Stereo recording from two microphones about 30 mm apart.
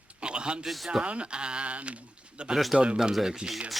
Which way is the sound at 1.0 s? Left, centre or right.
Right.